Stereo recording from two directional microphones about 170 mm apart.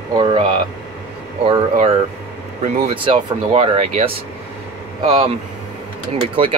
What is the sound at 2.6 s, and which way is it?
Speech, 35° right (ahead or behind).